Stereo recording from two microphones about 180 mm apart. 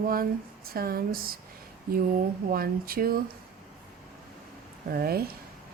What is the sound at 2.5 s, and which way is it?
Speech, 55° right (ahead or behind).